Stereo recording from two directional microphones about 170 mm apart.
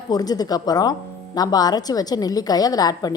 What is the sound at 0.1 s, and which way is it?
Speech, 20° left (ahead or behind).